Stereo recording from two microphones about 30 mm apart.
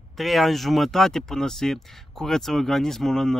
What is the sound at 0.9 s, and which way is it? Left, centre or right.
Speech, centre.